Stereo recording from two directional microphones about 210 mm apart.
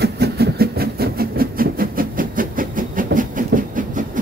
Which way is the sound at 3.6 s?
40° right (ahead or behind).